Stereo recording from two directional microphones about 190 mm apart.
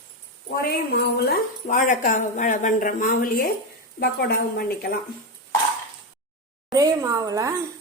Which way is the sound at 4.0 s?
55° left (ahead or behind).